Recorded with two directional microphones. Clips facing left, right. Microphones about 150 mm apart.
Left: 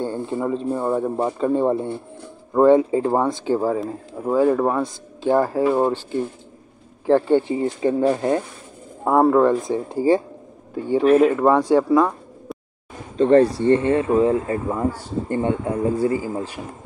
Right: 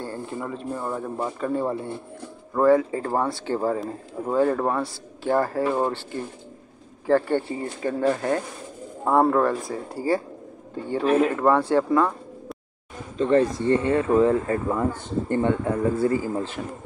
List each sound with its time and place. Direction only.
0.0 s speech: 25° left (ahead or behind)
7.1 s speech: 15° left (ahead or behind)
9.0 s speech: 10° left (ahead or behind)
13.2 s speech: 30° left (ahead or behind)
14.0 s speech: 15° left (ahead or behind)